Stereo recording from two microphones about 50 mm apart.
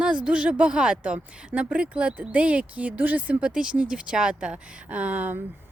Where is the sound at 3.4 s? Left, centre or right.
Right.